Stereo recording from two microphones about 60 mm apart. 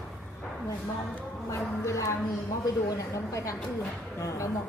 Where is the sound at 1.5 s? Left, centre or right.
Left.